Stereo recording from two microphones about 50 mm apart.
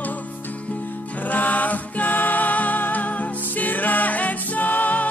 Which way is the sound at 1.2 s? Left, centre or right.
Left.